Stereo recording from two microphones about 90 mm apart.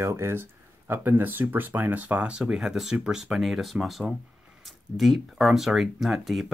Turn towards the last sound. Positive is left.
turn(degrees=0)  # may be behind; listen again after turning